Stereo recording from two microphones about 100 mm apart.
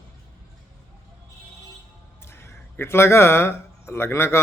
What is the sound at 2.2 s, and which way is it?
Speech, 25° left (ahead or behind).